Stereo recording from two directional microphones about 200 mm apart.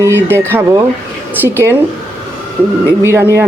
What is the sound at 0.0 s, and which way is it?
A woman's voice, 15° right (ahead or behind).